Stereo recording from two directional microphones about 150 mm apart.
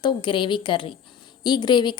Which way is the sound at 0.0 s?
30° left (ahead or behind).